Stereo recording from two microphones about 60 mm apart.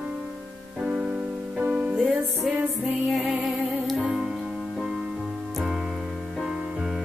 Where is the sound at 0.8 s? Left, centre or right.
Right.